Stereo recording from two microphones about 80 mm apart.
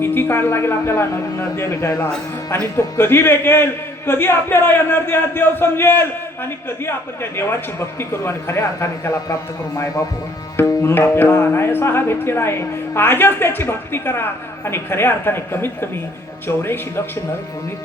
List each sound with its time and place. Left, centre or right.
0.0 s a man's voice: left
10.7 s a man's voice: left